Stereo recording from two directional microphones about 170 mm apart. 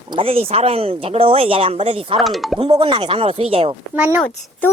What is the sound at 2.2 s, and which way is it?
Speech, centre (ahead or behind).